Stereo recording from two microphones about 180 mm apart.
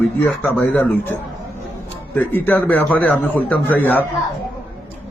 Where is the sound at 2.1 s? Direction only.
10° left (ahead or behind).